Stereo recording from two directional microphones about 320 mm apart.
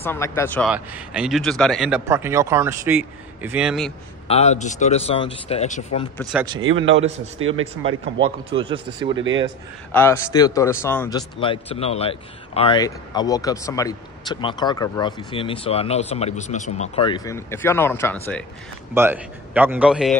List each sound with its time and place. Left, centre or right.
0.0 s speech: centre
4.3 s speech: left
7.3 s speech: right
8.2 s speech: centre
9.9 s a man's voice: centre
18.9 s speech: centre